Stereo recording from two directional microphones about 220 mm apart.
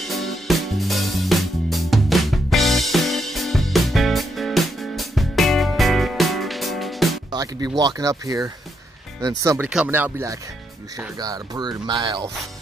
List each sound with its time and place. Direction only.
0.0 s music: centre (ahead or behind)
7.3 s speech: 15° right (ahead or behind)